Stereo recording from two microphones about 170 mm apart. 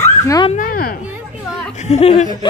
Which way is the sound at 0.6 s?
60° left (ahead or behind).